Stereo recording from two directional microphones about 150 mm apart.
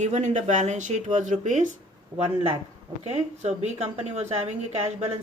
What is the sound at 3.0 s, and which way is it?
Speech, 45° right (ahead or behind).